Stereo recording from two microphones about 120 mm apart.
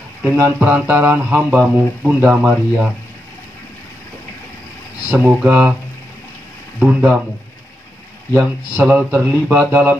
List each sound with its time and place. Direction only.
0.2 s speech: 15° right (ahead or behind)
5.1 s speech: 10° right (ahead or behind)
6.8 s speech: 15° right (ahead or behind)
8.3 s speech: 15° right (ahead or behind)